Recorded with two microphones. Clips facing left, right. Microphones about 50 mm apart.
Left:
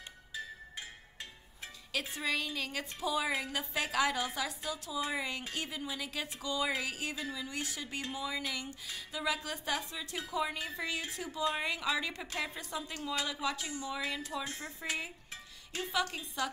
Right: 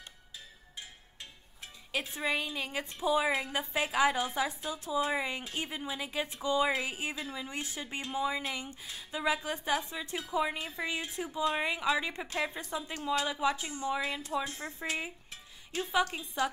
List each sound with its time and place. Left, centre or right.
2.1 s a woman's voice: right
13.9 s a woman's voice: right
14.2 s a woman's voice: right